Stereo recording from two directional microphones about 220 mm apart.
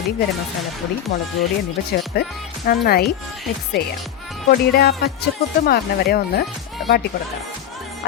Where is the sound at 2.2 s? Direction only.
45° left (ahead or behind).